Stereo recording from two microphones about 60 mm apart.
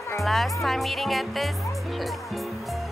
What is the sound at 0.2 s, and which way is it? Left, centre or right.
Speech, centre.